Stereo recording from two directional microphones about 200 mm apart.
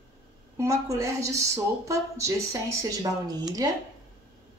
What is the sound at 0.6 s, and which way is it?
Speech, 15° right (ahead or behind).